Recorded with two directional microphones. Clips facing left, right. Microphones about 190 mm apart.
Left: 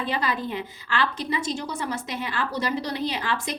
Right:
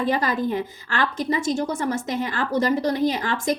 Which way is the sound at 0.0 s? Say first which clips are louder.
Right 5 dB; 45° right (ahead or behind).